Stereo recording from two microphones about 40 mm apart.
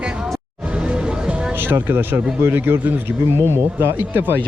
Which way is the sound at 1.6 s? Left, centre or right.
Right.